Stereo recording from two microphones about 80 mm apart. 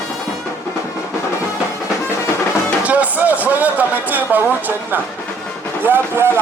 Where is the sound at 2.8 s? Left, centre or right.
Centre.